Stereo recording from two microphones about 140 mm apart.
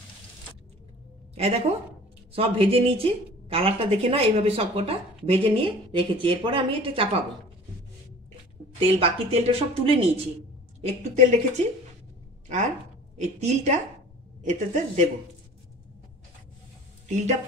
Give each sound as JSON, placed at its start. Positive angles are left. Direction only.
{"t": 1.3, "sound": "a woman's voice", "side_deg": -45}
{"t": 8.7, "sound": "a woman's voice", "side_deg": -40}
{"t": 10.8, "sound": "speech", "side_deg": -55}
{"t": 13.2, "sound": "a woman's voice", "side_deg": -55}